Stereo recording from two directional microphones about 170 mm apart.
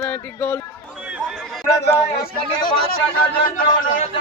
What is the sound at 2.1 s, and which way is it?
Speech, 65° left (ahead or behind).